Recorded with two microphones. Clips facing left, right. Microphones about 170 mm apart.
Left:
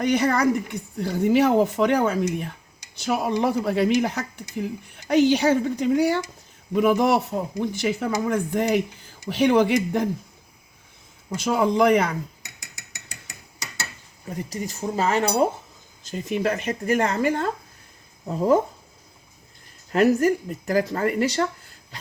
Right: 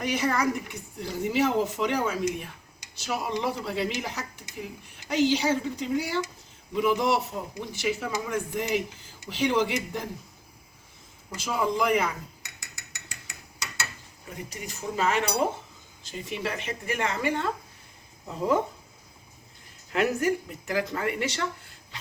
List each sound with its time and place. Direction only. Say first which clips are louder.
0.0 s speech: left 6 dB; 60° left (ahead or behind)
11.3 s speech: left 7 dB; 60° left (ahead or behind)
14.5 s speech: left 6 dB; 35° left (ahead or behind)
19.9 s speech: left 7 dB; 40° left (ahead or behind)